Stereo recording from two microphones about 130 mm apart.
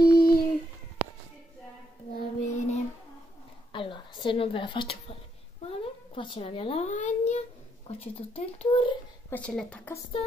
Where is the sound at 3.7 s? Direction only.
40° left (ahead or behind).